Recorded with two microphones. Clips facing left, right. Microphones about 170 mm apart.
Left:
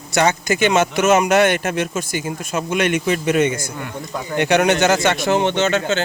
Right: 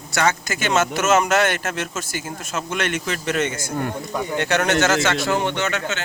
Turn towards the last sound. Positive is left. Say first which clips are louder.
# left 6 dB
turn(degrees=30)  # may be behind; listen again after turning